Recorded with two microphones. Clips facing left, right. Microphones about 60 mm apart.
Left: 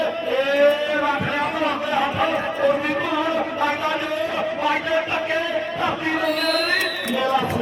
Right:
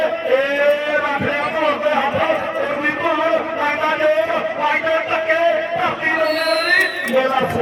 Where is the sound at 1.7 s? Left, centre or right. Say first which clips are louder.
Right 5 dB; right.